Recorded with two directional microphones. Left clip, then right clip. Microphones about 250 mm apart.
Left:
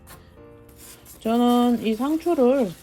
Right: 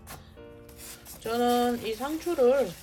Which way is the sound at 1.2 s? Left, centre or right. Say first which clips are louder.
Left 5 dB; left.